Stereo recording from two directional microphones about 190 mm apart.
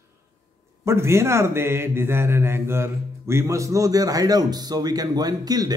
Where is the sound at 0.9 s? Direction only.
15° right (ahead or behind).